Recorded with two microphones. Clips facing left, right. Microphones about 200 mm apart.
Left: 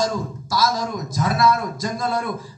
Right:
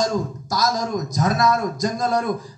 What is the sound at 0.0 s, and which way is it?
A man's voice, 45° right (ahead or behind).